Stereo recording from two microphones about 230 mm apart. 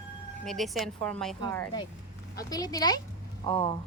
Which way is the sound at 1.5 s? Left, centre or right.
Centre.